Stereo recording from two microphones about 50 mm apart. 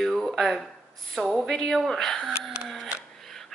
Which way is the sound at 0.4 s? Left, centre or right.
Centre.